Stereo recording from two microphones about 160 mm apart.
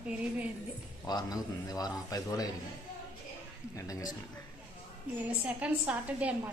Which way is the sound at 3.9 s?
20° left (ahead or behind).